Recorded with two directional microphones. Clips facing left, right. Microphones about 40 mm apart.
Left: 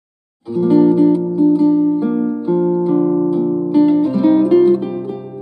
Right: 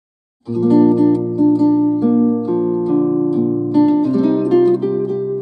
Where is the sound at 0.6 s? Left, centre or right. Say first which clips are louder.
Left 1 dB; centre.